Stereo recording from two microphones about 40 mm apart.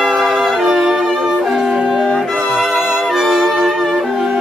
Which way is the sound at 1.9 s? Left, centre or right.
Centre.